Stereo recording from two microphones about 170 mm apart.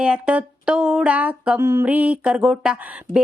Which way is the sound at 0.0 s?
5° right (ahead or behind).